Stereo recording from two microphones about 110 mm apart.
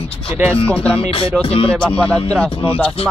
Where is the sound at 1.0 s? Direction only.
55° left (ahead or behind).